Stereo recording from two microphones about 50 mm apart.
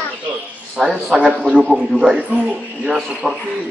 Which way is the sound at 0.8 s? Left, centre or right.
Centre.